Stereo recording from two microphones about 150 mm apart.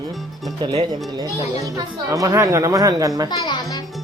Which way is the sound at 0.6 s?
35° right (ahead or behind).